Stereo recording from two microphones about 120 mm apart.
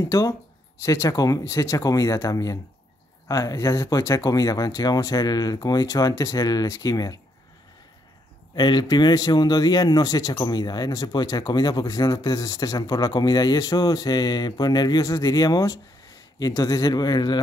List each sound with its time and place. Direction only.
0.0 s speech: 25° left (ahead or behind)
8.5 s a man's voice: 35° left (ahead or behind)